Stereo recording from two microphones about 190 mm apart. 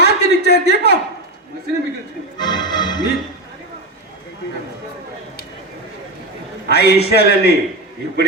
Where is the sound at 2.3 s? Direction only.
20° left (ahead or behind).